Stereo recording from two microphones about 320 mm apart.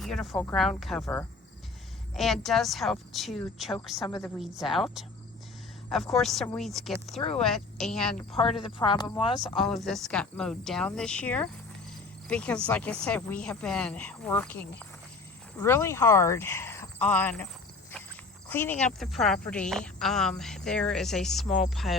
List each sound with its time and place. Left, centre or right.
0.0 s a woman's voice: centre
7.2 s speech: centre
7.4 s a woman's voice: centre
8.6 s speech: centre
9.6 s a woman's voice: centre